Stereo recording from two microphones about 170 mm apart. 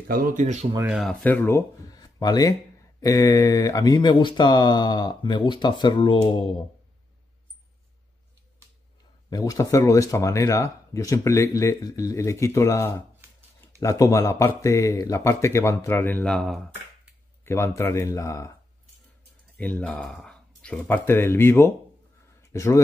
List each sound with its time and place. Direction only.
0.1 s speech: 55° right (ahead or behind)
0.8 s speech: 5° right (ahead or behind)
1.2 s speech: 10° left (ahead or behind)
2.0 s a sound: 25° left (ahead or behind)
3.0 s speech: 20° left (ahead or behind)
9.3 s speech: 20° left (ahead or behind); by 17.1 s centre (ahead or behind)
17.5 s speech: 15° left (ahead or behind)
19.5 s speech: 10° left (ahead or behind)